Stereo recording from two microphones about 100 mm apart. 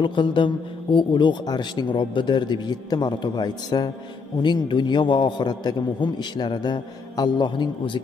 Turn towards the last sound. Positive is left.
turn(degrees=50)  # may be behind; listen again after turning